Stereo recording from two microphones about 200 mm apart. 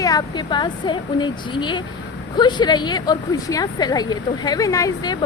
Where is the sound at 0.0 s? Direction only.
20° left (ahead or behind).